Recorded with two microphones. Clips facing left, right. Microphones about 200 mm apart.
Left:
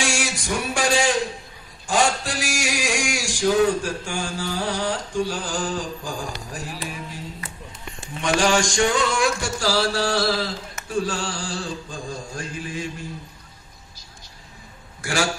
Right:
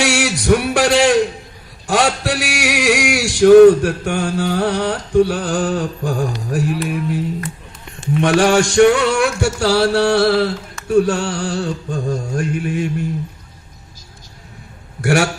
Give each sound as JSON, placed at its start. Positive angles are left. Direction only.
{"t": 0.0, "sound": "a man's voice", "side_deg": -65}
{"t": 1.9, "sound": "a sound", "side_deg": -65}
{"t": 15.0, "sound": "a man's voice", "side_deg": -65}